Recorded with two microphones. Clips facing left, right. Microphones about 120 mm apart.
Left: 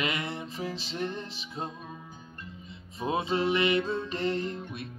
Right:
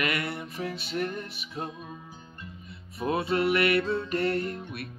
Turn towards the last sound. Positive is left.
turn(degrees=25)  # may be behind; listen again after turning